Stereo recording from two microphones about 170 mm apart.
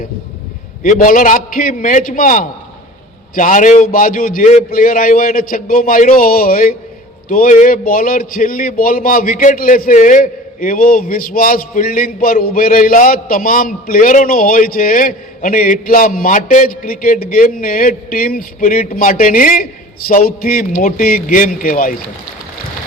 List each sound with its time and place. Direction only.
0.8 s a man's voice: 50° left (ahead or behind)